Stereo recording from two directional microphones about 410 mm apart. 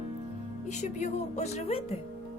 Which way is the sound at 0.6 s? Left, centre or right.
Centre.